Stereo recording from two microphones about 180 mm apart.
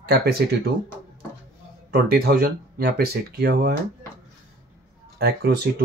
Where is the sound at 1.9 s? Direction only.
55° right (ahead or behind).